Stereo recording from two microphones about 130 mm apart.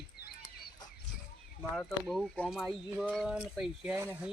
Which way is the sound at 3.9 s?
20° right (ahead or behind).